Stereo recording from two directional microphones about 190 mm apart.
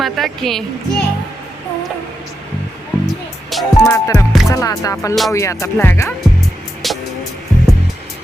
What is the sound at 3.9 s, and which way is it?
Speech, 15° left (ahead or behind).